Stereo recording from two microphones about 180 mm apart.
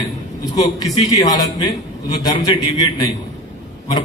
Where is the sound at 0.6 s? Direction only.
20° left (ahead or behind).